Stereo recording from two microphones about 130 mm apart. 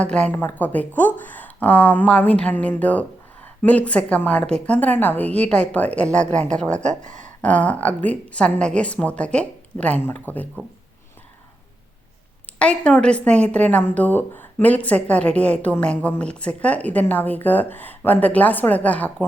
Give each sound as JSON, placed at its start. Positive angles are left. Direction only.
{"t": 0.0, "sound": "a woman's voice", "side_deg": 10}
{"t": 7.0, "sound": "speech", "side_deg": -70}
{"t": 7.4, "sound": "a woman's voice", "side_deg": 10}
{"t": 12.5, "sound": "a woman's voice", "side_deg": 10}